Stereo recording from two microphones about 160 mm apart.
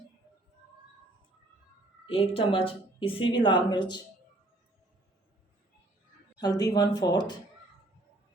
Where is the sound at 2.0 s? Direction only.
35° left (ahead or behind).